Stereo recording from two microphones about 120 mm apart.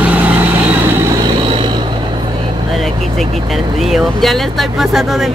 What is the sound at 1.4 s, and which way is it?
Vehicle, 45° right (ahead or behind).